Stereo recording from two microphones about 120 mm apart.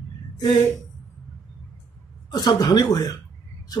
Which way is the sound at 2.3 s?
35° left (ahead or behind).